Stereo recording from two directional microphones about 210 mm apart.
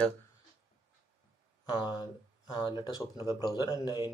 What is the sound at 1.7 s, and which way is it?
Speech, 20° left (ahead or behind).